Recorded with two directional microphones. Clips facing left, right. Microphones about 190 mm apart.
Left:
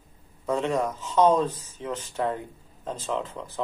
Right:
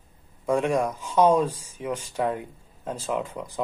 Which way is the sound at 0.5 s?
10° right (ahead or behind).